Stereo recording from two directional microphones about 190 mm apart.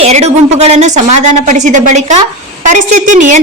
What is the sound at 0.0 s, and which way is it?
A woman's voice, 35° right (ahead or behind).